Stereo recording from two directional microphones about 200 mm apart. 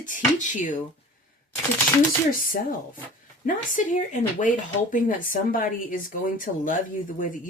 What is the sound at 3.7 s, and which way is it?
Speech, 40° left (ahead or behind).